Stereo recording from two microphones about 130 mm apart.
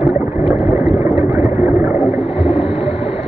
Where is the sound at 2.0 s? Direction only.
50° left (ahead or behind).